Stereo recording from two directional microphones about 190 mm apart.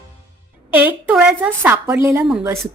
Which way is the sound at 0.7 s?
5° right (ahead or behind).